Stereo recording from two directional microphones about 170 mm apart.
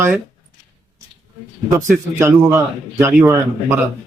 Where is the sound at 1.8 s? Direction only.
15° right (ahead or behind).